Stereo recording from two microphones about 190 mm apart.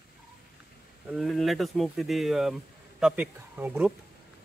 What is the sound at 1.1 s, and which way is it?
Speech, centre (ahead or behind).